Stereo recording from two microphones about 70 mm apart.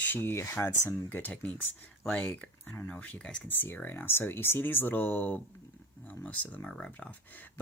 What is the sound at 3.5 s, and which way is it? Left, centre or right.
Speech, left.